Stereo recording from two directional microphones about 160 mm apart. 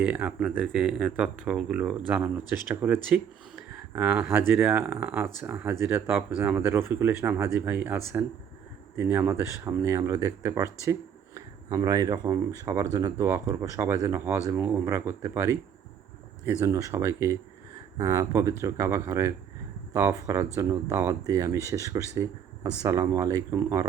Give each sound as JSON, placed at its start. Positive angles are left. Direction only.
{"t": 0.0, "sound": "speech", "side_deg": -10}